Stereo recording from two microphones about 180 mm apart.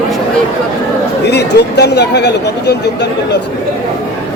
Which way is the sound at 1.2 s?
70° left (ahead or behind).